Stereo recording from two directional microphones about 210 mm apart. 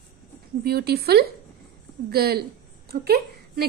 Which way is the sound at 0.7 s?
50° right (ahead or behind).